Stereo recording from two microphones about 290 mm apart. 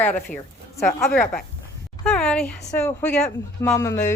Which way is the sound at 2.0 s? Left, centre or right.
Centre.